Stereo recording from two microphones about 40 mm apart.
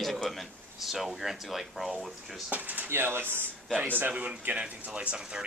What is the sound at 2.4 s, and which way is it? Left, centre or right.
Speech, right.